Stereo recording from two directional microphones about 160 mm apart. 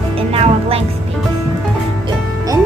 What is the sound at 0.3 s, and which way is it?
Speech, 40° right (ahead or behind).